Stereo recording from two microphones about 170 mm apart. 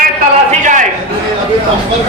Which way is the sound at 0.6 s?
45° right (ahead or behind).